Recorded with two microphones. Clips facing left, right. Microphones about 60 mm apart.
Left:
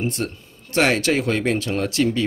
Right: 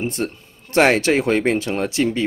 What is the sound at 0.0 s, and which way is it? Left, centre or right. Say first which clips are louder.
Speech: right 1 dB; right.